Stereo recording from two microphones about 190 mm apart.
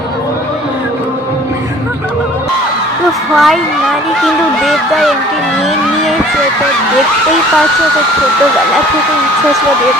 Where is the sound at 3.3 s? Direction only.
Centre (ahead or behind).